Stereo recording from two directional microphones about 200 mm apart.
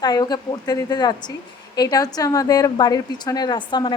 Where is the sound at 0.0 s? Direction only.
20° left (ahead or behind).